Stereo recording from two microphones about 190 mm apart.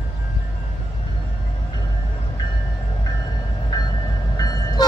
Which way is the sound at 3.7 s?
20° left (ahead or behind).